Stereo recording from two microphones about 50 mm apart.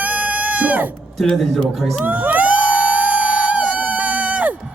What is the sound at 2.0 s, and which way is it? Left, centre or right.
Crowd, right.